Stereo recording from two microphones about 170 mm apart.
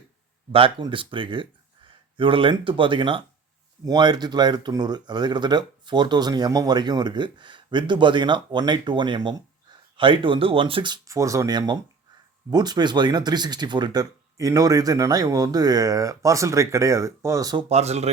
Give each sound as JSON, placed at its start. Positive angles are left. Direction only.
{"t": 0.5, "sound": "speech", "side_deg": -30}
{"t": 17.7, "sound": "speech", "side_deg": -40}